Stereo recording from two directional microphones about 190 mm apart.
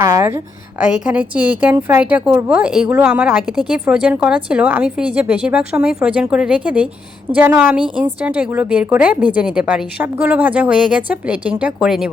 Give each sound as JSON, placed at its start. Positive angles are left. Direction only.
{"t": 0.0, "sound": "a woman's voice", "side_deg": -15}
{"t": 0.8, "sound": "a woman's voice", "side_deg": -5}